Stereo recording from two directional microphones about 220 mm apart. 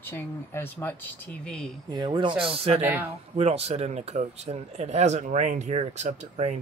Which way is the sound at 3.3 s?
30° right (ahead or behind).